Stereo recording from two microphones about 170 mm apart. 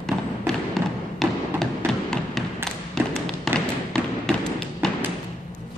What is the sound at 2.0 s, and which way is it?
Thump, 5° left (ahead or behind).